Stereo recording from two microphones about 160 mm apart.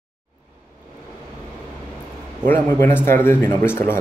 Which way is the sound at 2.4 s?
15° left (ahead or behind).